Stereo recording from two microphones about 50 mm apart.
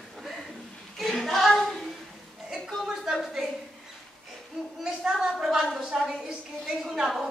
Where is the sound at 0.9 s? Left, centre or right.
Centre.